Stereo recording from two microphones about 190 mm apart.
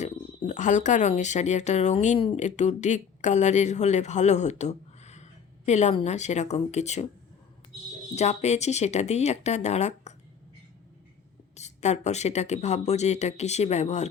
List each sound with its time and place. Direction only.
0.0 s speech: 40° left (ahead or behind)
8.1 s speech: 35° left (ahead or behind)
11.5 s speech: 35° left (ahead or behind)